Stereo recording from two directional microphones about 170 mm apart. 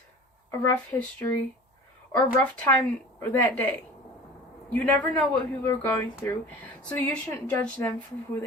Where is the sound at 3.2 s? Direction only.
10° left (ahead or behind).